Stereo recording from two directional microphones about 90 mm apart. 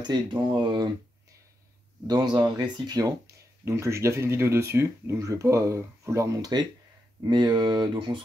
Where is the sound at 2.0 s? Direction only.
55° right (ahead or behind).